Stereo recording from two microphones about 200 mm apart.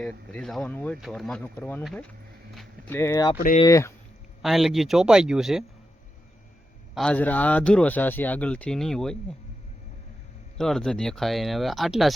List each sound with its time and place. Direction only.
0.0 s a man's voice: 5° left (ahead or behind)
3.3 s speech: 45° left (ahead or behind)
3.6 s a man's voice: 15° left (ahead or behind)
4.4 s speech: centre (ahead or behind)
6.9 s a man's voice: 5° left (ahead or behind)
10.6 s speech: centre (ahead or behind)